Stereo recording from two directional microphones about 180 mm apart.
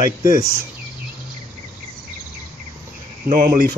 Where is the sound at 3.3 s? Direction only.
50° right (ahead or behind).